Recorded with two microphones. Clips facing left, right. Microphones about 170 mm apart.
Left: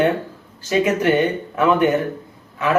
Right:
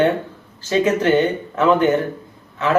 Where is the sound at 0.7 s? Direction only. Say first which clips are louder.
Right 1 dB; 15° left (ahead or behind).